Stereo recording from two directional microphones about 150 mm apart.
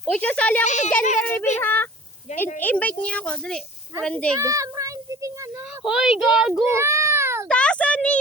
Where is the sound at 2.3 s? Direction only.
50° left (ahead or behind).